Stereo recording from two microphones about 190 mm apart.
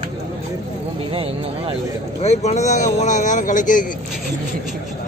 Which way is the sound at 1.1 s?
30° right (ahead or behind).